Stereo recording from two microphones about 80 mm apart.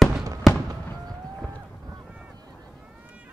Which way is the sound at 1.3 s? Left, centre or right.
Centre.